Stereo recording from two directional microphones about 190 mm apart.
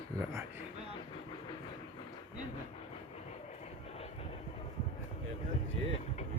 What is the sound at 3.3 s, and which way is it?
Vehicle, 35° left (ahead or behind).